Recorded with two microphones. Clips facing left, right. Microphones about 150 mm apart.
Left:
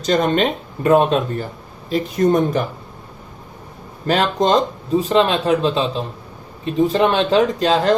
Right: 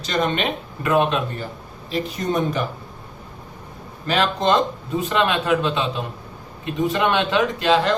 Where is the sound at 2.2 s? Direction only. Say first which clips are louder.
Left 11 dB; 50° left (ahead or behind).